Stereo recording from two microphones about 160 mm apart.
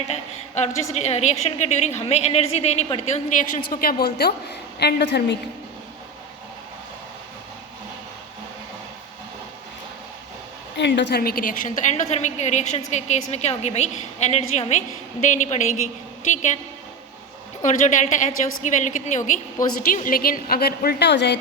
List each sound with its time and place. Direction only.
0.1 s a sound: 45° left (ahead or behind)
0.9 s a woman's voice: 45° left (ahead or behind); by 4.4 s 75° left (ahead or behind)
4.8 s a woman's voice: 90° left
10.8 s a woman's voice: 90° left; by 16.6 s 50° left (ahead or behind)
17.6 s a woman's voice: 50° left (ahead or behind)
19.9 s a woman's voice: 60° left (ahead or behind); by 21.3 s 90° left